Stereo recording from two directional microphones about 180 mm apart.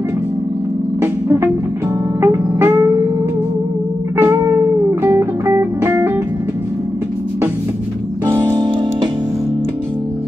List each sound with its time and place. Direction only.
2.2 s music: 15° right (ahead or behind)
4.2 s music: 15° right (ahead or behind)
8.3 s music: 15° right (ahead or behind)